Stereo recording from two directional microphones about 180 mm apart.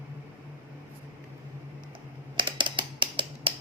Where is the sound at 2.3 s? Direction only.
25° right (ahead or behind).